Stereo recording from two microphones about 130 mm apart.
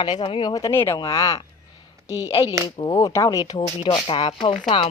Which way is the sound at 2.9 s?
25° left (ahead or behind).